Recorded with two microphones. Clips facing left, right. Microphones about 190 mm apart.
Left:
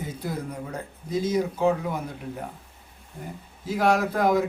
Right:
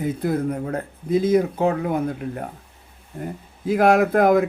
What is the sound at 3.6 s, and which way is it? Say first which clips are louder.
Speech: right 6 dB; 55° right (ahead or behind).